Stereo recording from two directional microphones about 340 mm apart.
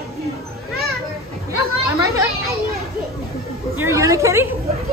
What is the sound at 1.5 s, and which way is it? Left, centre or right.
Chatter, centre.